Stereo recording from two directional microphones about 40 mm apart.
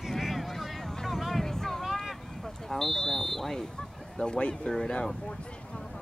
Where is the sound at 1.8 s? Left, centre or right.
Centre.